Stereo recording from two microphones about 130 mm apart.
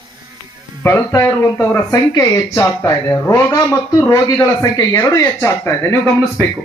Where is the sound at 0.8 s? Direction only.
20° left (ahead or behind).